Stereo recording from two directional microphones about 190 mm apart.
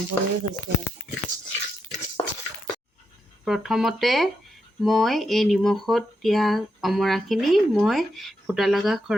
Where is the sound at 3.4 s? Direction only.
Centre (ahead or behind).